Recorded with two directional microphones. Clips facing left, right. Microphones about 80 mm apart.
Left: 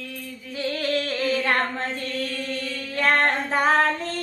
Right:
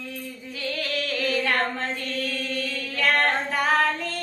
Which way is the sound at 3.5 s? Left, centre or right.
Left.